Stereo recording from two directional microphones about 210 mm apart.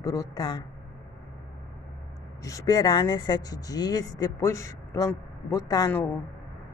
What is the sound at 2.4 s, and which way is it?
Speech, 15° left (ahead or behind).